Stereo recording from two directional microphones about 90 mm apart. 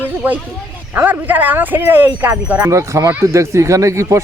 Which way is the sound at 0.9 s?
20° right (ahead or behind).